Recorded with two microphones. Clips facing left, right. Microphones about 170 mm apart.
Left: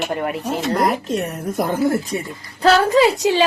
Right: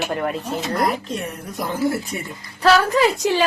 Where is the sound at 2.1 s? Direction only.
30° left (ahead or behind).